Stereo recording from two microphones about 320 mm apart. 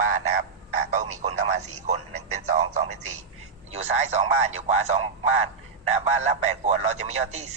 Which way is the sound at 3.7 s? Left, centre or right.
Right.